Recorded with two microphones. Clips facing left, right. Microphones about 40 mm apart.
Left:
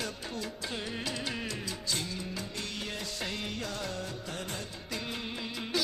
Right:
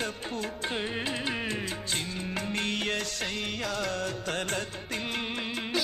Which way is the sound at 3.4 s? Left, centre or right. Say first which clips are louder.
Right 5 dB; right.